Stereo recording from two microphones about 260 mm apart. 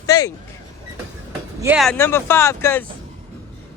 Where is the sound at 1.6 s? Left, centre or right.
Centre.